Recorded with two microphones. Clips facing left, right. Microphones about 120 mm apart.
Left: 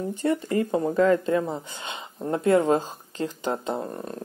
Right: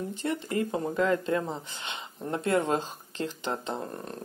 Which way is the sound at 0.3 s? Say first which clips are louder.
Left 6 dB; 25° left (ahead or behind).